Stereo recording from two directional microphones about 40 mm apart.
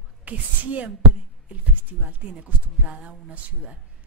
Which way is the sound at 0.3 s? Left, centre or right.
Right.